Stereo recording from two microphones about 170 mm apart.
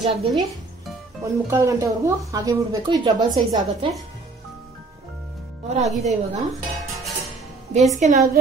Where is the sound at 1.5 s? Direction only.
20° right (ahead or behind).